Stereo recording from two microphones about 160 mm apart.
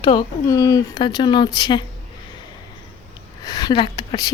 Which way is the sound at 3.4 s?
25° left (ahead or behind).